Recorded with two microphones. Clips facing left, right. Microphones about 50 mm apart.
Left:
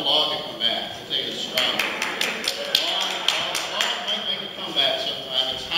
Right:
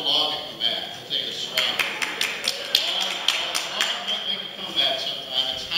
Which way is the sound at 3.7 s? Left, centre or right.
Centre.